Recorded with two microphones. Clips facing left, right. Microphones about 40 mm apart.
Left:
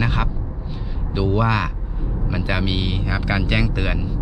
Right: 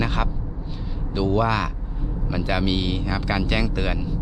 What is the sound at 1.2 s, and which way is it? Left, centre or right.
Speech, centre.